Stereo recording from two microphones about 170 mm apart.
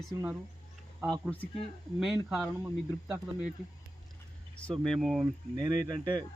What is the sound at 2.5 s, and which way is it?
Speech, 15° right (ahead or behind).